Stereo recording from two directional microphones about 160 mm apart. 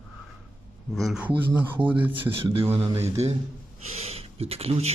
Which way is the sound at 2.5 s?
35° right (ahead or behind).